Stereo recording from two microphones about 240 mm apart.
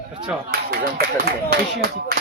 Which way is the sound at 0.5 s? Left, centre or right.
Right.